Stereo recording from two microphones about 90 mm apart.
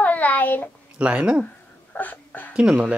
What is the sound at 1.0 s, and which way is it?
Speech, 10° right (ahead or behind).